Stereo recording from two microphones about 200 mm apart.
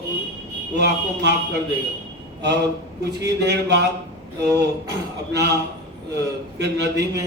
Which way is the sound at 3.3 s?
55° right (ahead or behind).